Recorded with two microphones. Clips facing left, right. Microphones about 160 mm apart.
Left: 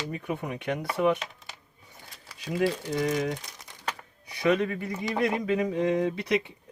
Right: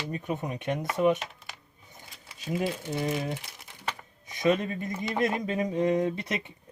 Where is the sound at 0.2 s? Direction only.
20° right (ahead or behind).